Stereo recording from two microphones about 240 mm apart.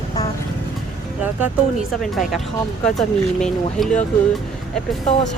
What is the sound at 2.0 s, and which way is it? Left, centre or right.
Speech, centre.